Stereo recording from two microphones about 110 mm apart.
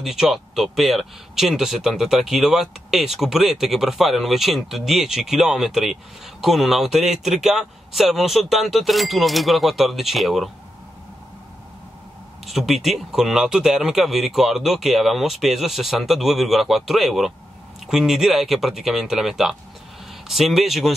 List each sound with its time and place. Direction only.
0.0 s speech: 5° right (ahead or behind)
12.4 s speech: centre (ahead or behind)